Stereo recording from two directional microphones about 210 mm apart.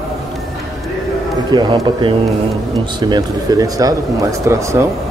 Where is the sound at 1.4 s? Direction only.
20° right (ahead or behind).